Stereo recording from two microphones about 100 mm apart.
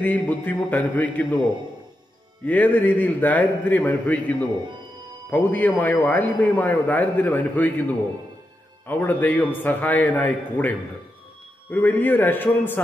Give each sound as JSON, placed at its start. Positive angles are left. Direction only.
{"t": 0.0, "sound": "a man's voice", "side_deg": 15}
{"t": 2.4, "sound": "a man's voice", "side_deg": 15}
{"t": 8.8, "sound": "a man's voice", "side_deg": 15}
{"t": 11.7, "sound": "a man's voice", "side_deg": 20}